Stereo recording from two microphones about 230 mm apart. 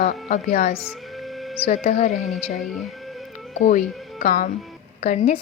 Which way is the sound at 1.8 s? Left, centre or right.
Left.